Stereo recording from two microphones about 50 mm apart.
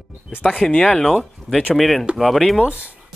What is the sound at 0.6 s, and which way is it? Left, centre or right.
Speech, centre.